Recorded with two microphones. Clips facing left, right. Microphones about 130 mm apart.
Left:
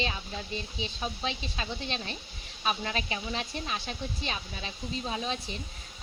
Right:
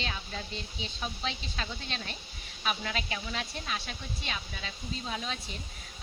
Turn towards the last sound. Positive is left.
turn(degrees=25)  # may be behind; listen again after turning